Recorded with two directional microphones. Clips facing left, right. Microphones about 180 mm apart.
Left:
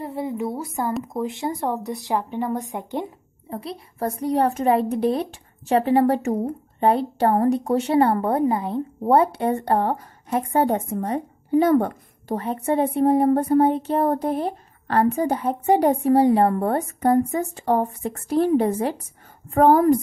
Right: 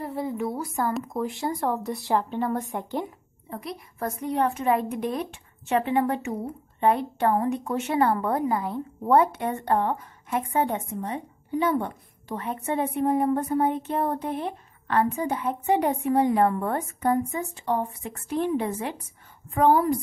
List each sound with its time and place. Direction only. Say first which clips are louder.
0.0 s a sound: left 2 dB; 20° left (ahead or behind)
1.0 s a woman's voice: left 2 dB; 20° left (ahead or behind)
3.4 s a woman's voice: left 3 dB; 30° left (ahead or behind); by 20.0 s 45° left (ahead or behind)